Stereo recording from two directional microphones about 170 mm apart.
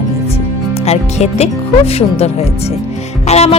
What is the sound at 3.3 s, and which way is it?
Speech, 40° left (ahead or behind).